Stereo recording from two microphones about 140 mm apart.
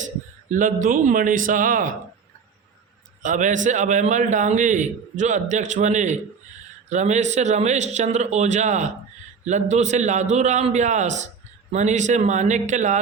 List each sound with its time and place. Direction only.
0.5 s a man's voice: 70° right (ahead or behind)
3.2 s a man's voice: 65° right (ahead or behind)